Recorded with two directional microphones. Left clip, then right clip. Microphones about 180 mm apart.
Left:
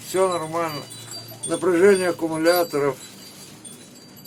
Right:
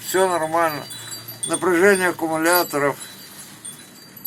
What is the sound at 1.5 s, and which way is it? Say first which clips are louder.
Speech: even; 5° right (ahead or behind).